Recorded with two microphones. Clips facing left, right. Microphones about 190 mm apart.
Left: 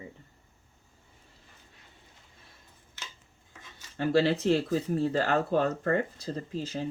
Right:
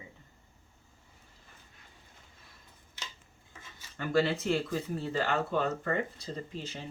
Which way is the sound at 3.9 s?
30° left (ahead or behind).